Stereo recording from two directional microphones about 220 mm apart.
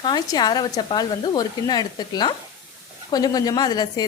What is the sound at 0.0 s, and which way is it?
A woman's voice, 20° left (ahead or behind).